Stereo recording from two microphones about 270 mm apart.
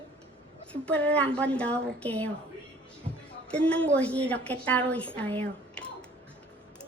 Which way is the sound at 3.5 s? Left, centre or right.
Centre.